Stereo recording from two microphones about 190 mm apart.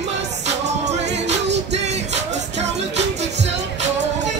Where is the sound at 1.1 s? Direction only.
65° right (ahead or behind).